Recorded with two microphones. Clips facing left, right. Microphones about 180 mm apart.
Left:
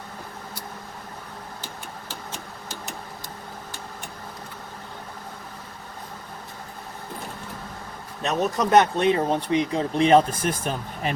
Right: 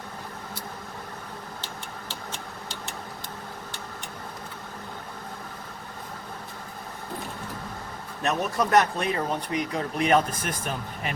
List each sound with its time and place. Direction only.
8.2 s speech: 20° left (ahead or behind)